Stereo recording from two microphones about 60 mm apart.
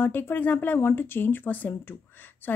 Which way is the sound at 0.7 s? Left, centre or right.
Left.